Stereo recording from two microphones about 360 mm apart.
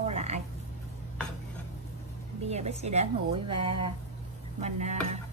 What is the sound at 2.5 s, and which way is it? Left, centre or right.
A woman's voice, centre.